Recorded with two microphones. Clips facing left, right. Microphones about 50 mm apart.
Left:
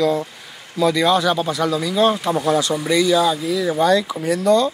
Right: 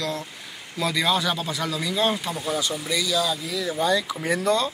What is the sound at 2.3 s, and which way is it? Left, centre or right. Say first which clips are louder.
Speech: left 9 dB; left.